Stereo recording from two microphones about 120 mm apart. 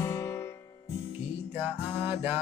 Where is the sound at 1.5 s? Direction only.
15° right (ahead or behind).